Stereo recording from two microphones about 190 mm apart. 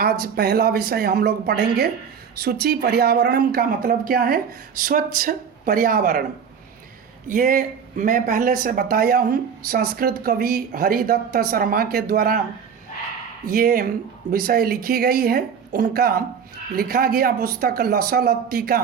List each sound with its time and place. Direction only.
0.0 s a woman's voice: 55° right (ahead or behind)
7.3 s speech: 45° right (ahead or behind)
13.5 s speech: 50° right (ahead or behind)